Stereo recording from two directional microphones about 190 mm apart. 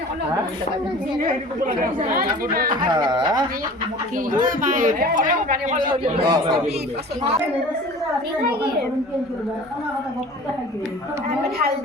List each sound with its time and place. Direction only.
1.2 s speech: 50° right (ahead or behind)
2.9 s speech: 20° right (ahead or behind)
4.3 s speech: 45° right (ahead or behind)
6.2 s speech: 20° right (ahead or behind)